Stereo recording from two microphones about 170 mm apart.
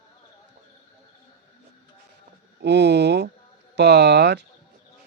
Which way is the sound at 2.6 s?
90° right.